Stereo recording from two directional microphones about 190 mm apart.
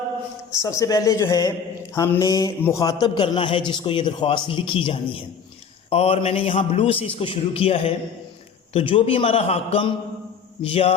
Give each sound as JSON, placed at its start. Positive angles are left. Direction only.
{"t": 0.5, "sound": "a man's voice", "side_deg": 15}